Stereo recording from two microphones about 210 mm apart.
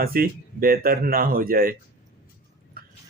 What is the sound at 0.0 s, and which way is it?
Speech, 45° right (ahead or behind).